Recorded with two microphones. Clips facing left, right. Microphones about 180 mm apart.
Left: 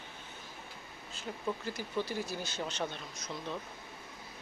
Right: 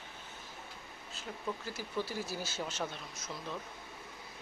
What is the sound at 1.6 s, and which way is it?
Speech, 5° right (ahead or behind).